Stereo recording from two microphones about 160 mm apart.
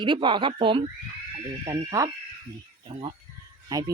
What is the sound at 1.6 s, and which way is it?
Speech, 20° right (ahead or behind).